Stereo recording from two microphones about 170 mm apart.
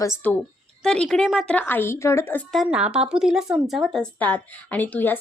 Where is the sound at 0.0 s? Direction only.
15° left (ahead or behind).